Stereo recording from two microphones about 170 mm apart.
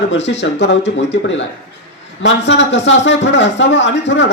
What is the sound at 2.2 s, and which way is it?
A man's voice, 90° left.